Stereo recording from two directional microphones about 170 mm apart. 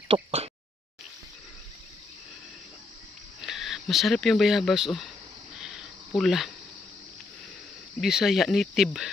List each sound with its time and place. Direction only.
0.1 s a sound: 35° right (ahead or behind)
3.4 s speech: centre (ahead or behind)
5.5 s insect: 5° right (ahead or behind)
8.0 s speech: centre (ahead or behind)